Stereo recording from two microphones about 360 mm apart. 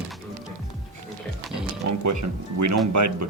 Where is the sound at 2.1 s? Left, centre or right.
Right.